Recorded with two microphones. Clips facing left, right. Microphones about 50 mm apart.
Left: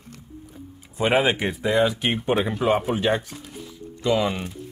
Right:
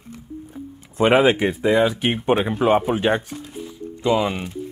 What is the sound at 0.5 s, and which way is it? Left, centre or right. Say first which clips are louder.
Music: right 6 dB; right.